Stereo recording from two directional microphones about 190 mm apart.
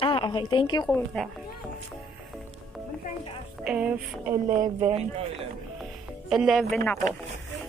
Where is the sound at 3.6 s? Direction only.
5° right (ahead or behind).